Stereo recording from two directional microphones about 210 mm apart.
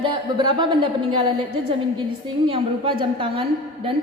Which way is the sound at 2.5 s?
25° right (ahead or behind).